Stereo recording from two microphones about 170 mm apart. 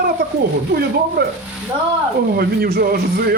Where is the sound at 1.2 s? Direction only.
70° right (ahead or behind).